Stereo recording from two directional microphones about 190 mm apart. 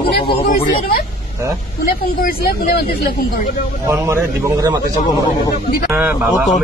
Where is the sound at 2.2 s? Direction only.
50° left (ahead or behind).